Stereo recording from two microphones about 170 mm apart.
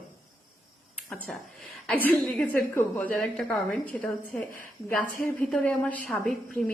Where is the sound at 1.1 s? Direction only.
10° left (ahead or behind).